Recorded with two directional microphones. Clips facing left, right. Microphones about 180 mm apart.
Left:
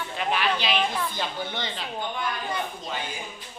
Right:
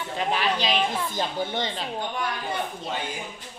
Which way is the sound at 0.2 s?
35° right (ahead or behind).